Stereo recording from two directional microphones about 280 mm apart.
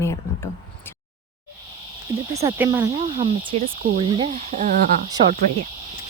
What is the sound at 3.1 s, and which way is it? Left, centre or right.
Speech, right.